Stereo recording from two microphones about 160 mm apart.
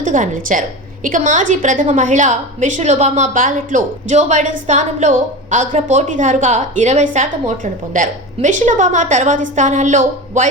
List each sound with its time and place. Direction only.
0.0 s a woman's voice: 55° right (ahead or behind)